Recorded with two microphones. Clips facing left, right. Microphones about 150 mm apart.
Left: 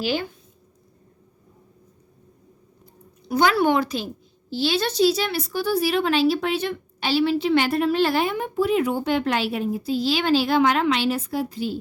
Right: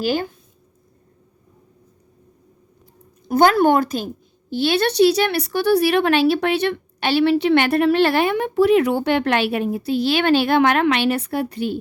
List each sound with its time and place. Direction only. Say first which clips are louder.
0.0 s speech: right 4 dB; 45° right (ahead or behind)
3.2 s a woman's voice: right 5 dB; 50° right (ahead or behind)